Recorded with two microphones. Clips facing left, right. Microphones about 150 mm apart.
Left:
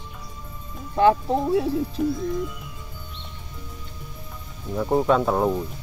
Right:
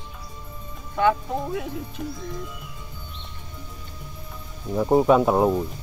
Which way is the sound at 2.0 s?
Centre (ahead or behind).